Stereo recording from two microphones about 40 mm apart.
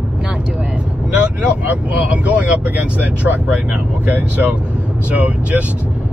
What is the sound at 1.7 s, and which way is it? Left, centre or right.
Speech, right.